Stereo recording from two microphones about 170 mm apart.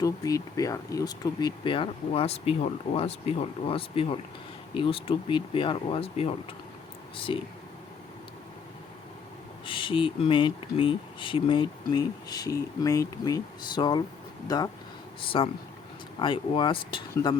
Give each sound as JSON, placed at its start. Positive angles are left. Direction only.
{"t": 0.0, "sound": "speech", "side_deg": 20}
{"t": 9.6, "sound": "speech", "side_deg": 30}